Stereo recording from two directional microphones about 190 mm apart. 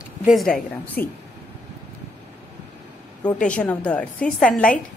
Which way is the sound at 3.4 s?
5° left (ahead or behind).